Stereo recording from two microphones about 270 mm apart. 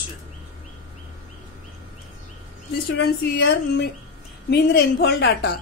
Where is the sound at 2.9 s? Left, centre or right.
Left.